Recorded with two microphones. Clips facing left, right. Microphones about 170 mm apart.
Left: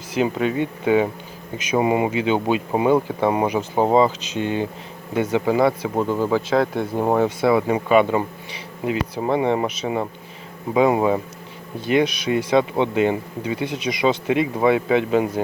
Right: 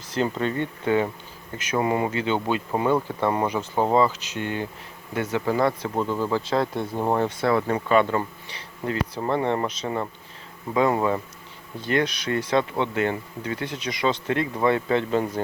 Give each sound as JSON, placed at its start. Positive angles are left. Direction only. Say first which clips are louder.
{"t": 0.1, "sound": "speech", "louder": "left 4 dB", "side_deg": 10}
{"t": 6.5, "sound": "speech", "louder": "left 4 dB", "side_deg": 0}
{"t": 6.9, "sound": "speech", "louder": "left 5 dB", "side_deg": 10}